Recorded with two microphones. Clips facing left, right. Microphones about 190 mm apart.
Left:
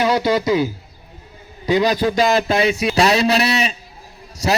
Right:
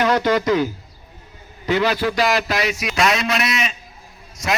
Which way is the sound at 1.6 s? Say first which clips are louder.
Left 3 dB; 15° left (ahead or behind).